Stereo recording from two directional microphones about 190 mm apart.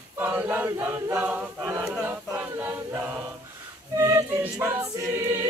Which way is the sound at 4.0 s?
15° right (ahead or behind).